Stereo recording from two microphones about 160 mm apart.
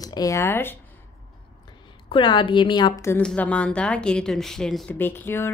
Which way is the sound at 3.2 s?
5° left (ahead or behind).